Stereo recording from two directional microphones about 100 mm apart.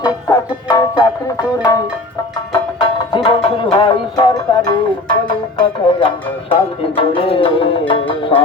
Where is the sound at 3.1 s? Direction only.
55° left (ahead or behind).